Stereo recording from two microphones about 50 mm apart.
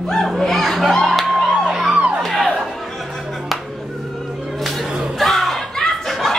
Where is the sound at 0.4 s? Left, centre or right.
Centre.